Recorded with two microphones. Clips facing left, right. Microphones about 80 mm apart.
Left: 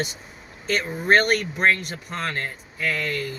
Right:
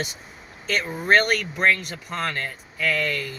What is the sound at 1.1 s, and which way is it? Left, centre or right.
Speech, left.